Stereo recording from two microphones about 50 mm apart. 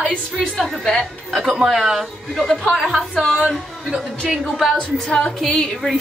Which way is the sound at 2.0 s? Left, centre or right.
Centre.